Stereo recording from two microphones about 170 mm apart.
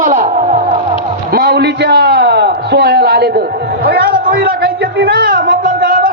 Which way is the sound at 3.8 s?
65° right (ahead or behind).